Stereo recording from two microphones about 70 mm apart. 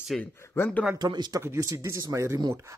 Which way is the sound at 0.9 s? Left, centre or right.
Right.